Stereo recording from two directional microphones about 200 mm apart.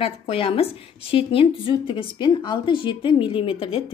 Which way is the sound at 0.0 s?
30° left (ahead or behind).